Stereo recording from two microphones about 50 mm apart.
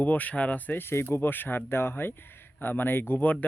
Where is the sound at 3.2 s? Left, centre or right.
Left.